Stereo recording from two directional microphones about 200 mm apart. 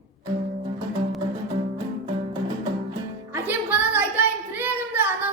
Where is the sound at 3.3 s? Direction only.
10° right (ahead or behind).